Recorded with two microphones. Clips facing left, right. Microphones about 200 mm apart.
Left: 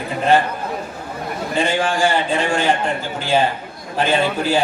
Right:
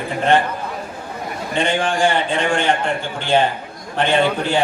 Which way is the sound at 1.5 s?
5° left (ahead or behind).